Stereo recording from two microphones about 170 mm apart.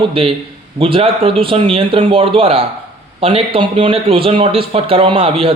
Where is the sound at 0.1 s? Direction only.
30° right (ahead or behind).